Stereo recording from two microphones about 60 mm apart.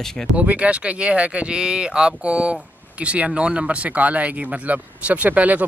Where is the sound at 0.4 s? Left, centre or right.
Right.